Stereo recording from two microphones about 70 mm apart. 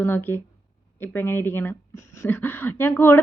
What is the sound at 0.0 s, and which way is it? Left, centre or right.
A woman's voice, left.